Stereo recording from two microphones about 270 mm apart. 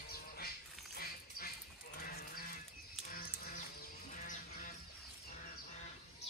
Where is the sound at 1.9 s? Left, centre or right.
Left.